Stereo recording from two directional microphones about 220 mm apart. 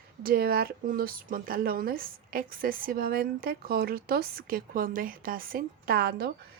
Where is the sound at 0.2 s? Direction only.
40° right (ahead or behind).